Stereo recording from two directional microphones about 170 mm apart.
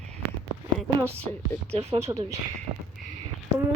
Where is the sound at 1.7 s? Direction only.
40° right (ahead or behind).